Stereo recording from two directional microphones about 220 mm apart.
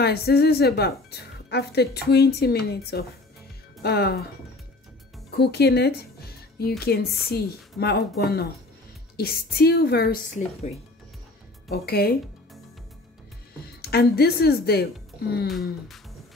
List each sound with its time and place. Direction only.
0.0 s speech: 45° left (ahead or behind)
5.3 s speech: 45° left (ahead or behind)
11.7 s speech: 45° left (ahead or behind)
13.7 s speech: 45° left (ahead or behind)
15.4 s a sound: centre (ahead or behind)